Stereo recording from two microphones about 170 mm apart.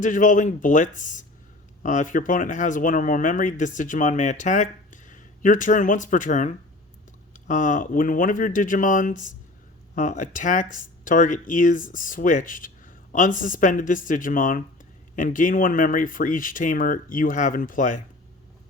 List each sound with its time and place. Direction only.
0.0 s speech: 50° left (ahead or behind)